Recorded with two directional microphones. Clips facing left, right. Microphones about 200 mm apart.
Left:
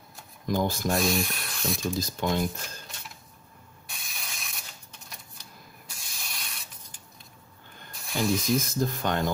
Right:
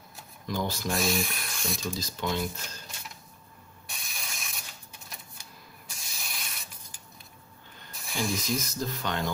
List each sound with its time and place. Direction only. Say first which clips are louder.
0.5 s speech: left 5 dB; 50° left (ahead or behind)
0.9 s speech: even; centre (ahead or behind)
2.0 s speech: left 3 dB; 50° left (ahead or behind)
3.9 s ratchet: right 1 dB; centre (ahead or behind)
5.9 s spray: right 1 dB; centre (ahead or behind)
7.9 s a sound: left 5 dB; centre (ahead or behind)
8.5 s speech: left 5 dB; 50° left (ahead or behind)